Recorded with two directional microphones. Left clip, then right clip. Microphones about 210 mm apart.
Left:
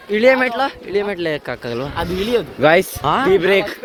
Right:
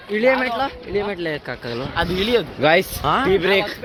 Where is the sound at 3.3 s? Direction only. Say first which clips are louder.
Left 3 dB; 60° left (ahead or behind).